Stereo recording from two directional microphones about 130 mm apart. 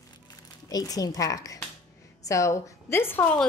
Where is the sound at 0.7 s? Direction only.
30° left (ahead or behind).